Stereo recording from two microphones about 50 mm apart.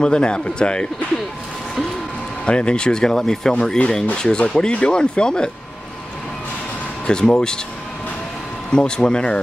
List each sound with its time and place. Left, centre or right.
0.0 s speech: centre
2.4 s speech: centre
7.1 s speech: centre
8.7 s speech: centre